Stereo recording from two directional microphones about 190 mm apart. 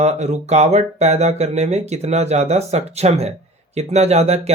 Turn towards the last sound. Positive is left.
turn(degrees=-35)  # may be behind; listen again after turning